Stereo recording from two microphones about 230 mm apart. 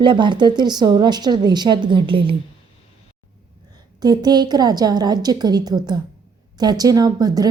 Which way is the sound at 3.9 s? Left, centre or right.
Centre.